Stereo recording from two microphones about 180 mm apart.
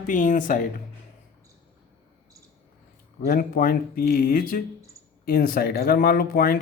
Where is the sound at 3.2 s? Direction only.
50° left (ahead or behind).